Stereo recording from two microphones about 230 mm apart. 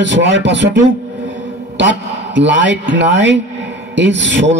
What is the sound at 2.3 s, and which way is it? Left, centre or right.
A man's voice, right.